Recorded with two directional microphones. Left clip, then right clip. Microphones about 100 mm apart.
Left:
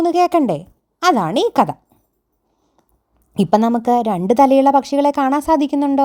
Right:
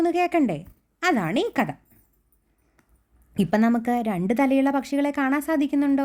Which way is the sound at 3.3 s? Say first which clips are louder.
Left 8 dB; 45° left (ahead or behind).